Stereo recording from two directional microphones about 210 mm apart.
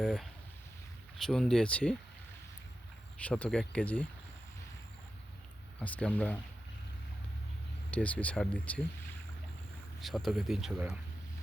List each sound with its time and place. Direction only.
0.0 s speech: centre (ahead or behind)
3.2 s speech: 5° left (ahead or behind)
5.8 s speech: 5° left (ahead or behind)
7.9 s speech: 5° left (ahead or behind)
10.0 s speech: centre (ahead or behind)